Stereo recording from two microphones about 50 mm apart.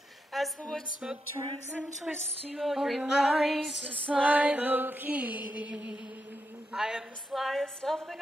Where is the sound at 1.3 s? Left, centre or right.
Left.